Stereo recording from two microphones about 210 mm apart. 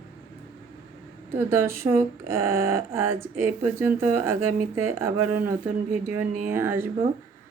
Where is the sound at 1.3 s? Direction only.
10° right (ahead or behind).